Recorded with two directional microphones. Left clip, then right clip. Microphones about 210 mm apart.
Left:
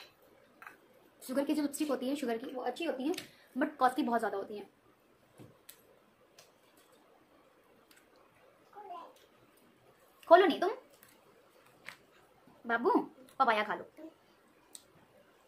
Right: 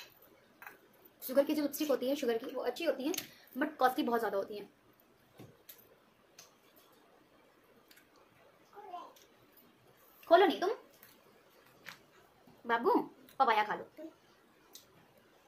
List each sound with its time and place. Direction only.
1.2 s speech: 5° left (ahead or behind)
10.2 s a woman's voice: 20° left (ahead or behind)
12.6 s speech: 5° left (ahead or behind)